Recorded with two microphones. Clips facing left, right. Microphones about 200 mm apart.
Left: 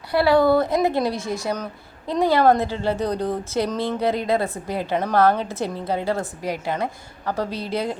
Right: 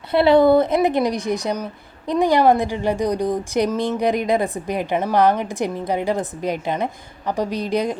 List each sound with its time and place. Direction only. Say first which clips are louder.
0.1 s a woman's voice: right 3 dB; 20° right (ahead or behind)